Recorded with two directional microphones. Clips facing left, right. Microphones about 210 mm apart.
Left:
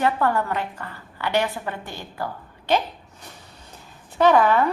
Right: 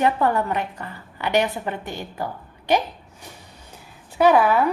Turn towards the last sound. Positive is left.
turn(degrees=-10)  # may be behind; listen again after turning